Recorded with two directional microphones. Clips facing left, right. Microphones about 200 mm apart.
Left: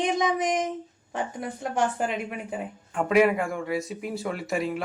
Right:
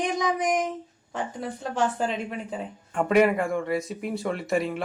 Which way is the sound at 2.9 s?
Centre (ahead or behind).